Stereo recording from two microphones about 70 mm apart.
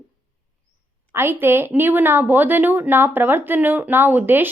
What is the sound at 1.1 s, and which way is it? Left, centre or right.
Speech, right.